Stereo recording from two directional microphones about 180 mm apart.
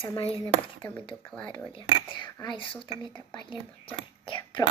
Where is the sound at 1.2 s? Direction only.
5° left (ahead or behind).